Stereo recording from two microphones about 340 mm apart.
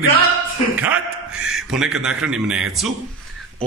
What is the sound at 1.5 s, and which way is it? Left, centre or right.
A man's voice, centre.